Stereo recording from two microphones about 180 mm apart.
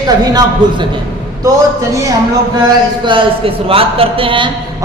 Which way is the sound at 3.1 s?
30° right (ahead or behind).